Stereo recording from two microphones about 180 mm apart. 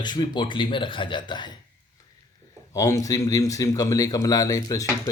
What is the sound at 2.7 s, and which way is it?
A man's voice, 20° left (ahead or behind).